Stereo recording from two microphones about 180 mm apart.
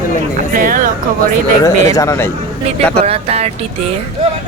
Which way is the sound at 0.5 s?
50° right (ahead or behind).